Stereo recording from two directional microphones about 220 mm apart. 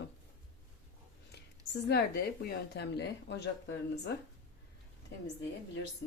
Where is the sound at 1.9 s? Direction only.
45° left (ahead or behind).